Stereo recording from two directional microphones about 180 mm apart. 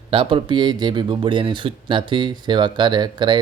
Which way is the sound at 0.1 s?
30° right (ahead or behind).